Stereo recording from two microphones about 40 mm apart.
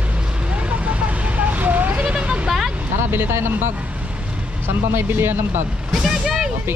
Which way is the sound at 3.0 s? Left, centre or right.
Right.